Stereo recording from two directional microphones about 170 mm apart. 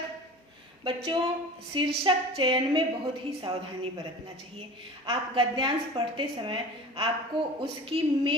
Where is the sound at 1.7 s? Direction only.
30° right (ahead or behind).